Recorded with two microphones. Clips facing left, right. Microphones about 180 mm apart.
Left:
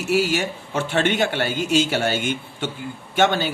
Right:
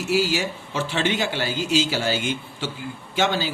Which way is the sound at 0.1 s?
60° left (ahead or behind).